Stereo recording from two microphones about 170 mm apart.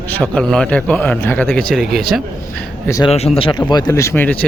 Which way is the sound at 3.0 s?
35° left (ahead or behind).